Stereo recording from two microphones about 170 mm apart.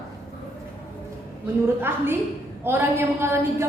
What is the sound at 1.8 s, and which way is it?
Speech, 15° right (ahead or behind).